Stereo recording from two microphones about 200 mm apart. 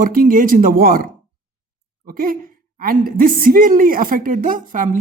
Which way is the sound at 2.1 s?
45° right (ahead or behind).